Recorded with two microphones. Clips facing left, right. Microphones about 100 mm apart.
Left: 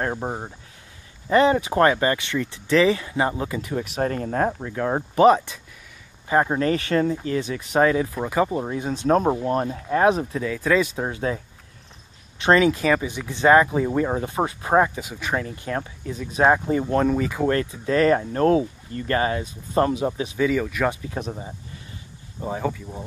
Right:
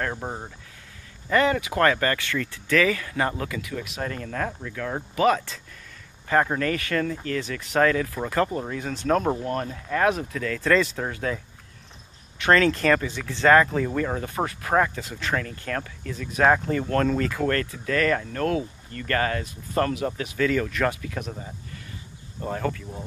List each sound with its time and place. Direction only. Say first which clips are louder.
0.0 s speech: left 3 dB; 20° left (ahead or behind)
3.6 s speech: left 6 dB; 35° left (ahead or behind)
6.2 s speech: left 2 dB; 15° left (ahead or behind)
10.4 s speech: even; 10° left (ahead or behind)
20.9 s speech: left 3 dB; 25° left (ahead or behind)
22.4 s speech: left 2 dB; 10° left (ahead or behind)